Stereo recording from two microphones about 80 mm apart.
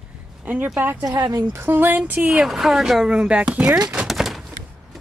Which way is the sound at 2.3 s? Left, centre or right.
Centre.